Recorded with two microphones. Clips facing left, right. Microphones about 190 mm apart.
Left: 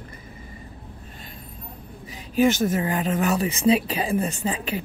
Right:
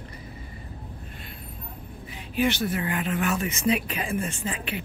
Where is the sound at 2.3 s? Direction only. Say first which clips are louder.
Left 5 dB; 45° left (ahead or behind).